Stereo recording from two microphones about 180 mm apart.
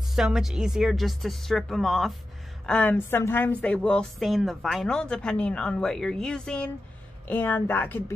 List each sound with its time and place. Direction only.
0.1 s a woman's voice: centre (ahead or behind)